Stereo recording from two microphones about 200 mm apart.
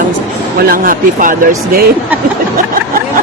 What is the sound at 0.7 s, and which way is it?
Speech, 45° right (ahead or behind).